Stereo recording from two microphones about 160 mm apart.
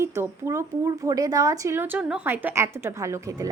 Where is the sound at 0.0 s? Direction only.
15° right (ahead or behind).